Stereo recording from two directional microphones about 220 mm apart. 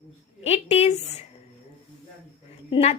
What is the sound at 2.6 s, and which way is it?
Speech, 20° left (ahead or behind).